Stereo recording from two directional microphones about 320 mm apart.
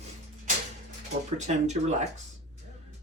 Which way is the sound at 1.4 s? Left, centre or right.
Right.